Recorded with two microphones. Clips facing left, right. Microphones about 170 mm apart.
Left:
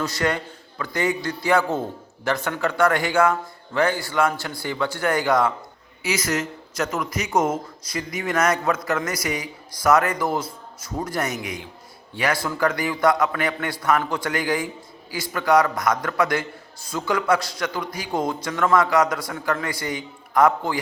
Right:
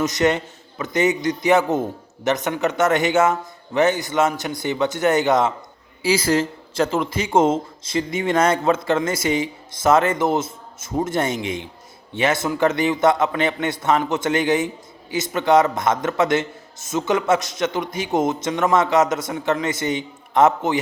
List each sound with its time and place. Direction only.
0.0 s speech: 20° right (ahead or behind)